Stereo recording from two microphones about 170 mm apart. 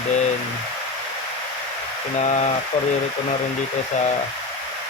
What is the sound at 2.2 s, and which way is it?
Speech, 40° left (ahead or behind).